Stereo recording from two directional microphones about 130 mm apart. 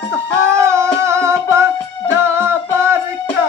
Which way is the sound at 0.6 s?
20° right (ahead or behind).